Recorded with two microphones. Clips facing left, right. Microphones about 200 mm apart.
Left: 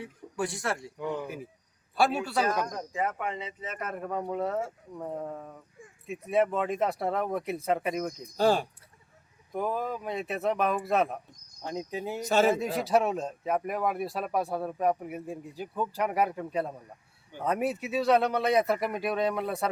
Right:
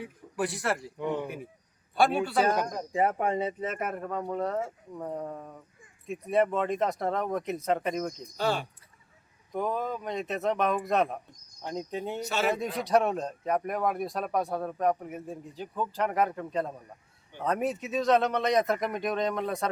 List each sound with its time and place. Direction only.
0.0 s speech: centre (ahead or behind)
1.0 s speech: 25° right (ahead or behind)
2.0 s speech: centre (ahead or behind)
2.4 s speech: 30° right (ahead or behind)
3.3 s speech: 50° right (ahead or behind)
3.9 s speech: 5° left (ahead or behind)
8.4 s speech: 40° left (ahead or behind)
9.5 s speech: 5° left (ahead or behind)